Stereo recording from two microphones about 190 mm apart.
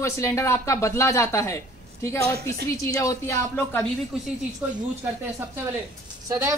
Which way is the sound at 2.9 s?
15° left (ahead or behind).